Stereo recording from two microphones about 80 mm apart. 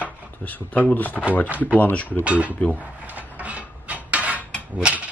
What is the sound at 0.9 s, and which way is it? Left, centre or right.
Speech, left.